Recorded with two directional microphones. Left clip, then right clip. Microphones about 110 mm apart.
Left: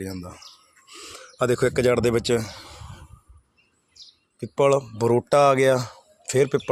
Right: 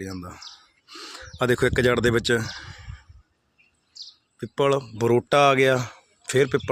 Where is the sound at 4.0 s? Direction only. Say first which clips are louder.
Right 6 dB; 30° left (ahead or behind).